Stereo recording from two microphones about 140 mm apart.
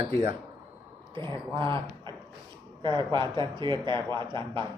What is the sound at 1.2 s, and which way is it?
Speech, 15° left (ahead or behind).